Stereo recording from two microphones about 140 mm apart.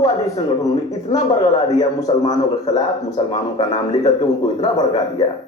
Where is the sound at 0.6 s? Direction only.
25° left (ahead or behind).